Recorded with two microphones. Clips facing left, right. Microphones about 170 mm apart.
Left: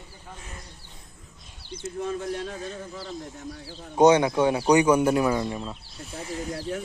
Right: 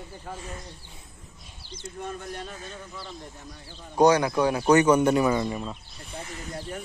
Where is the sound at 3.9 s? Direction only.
20° left (ahead or behind).